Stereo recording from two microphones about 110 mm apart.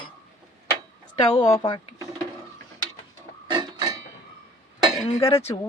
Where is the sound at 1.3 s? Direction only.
40° left (ahead or behind).